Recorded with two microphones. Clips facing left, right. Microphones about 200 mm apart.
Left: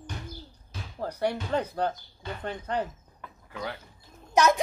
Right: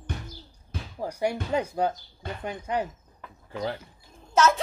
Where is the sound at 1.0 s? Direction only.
10° right (ahead or behind).